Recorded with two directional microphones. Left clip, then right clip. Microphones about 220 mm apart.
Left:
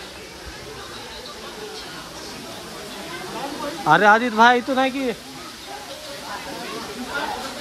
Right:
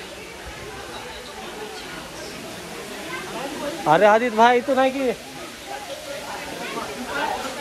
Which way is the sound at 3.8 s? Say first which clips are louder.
Left 1 dB; 20° left (ahead or behind).